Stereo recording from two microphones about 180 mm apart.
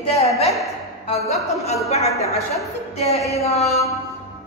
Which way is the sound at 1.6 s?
35° left (ahead or behind).